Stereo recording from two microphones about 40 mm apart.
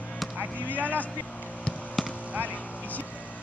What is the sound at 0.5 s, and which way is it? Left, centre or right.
Vehicle, left.